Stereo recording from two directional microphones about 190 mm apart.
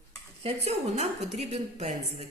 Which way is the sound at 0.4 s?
35° right (ahead or behind).